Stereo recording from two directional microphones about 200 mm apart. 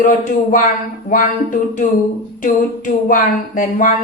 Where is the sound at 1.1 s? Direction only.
40° left (ahead or behind).